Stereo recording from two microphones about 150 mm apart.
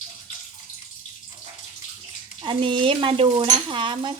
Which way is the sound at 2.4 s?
35° right (ahead or behind).